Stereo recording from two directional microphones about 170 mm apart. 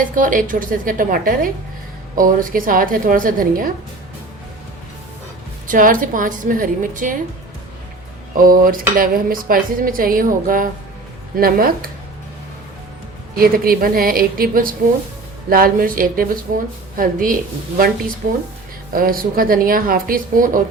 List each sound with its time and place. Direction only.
0.0 s a woman's voice: 55° right (ahead or behind)
5.6 s a woman's voice: 50° right (ahead or behind)
8.4 s speech: 55° right (ahead or behind)
13.3 s speech: 60° right (ahead or behind)
18.9 s speech: 60° right (ahead or behind)